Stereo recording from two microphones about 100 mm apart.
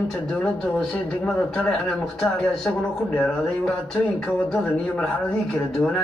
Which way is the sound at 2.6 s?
25° left (ahead or behind).